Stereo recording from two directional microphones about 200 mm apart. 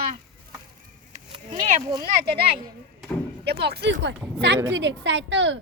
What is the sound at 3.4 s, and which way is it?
A woman's voice, 55° right (ahead or behind).